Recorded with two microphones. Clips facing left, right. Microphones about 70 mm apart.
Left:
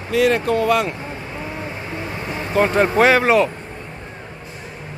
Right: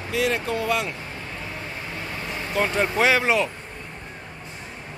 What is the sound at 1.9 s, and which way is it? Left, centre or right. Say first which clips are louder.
Vehicle: left 4 dB; centre.